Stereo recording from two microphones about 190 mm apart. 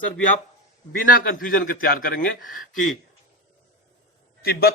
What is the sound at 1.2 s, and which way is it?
Speech, 50° left (ahead or behind).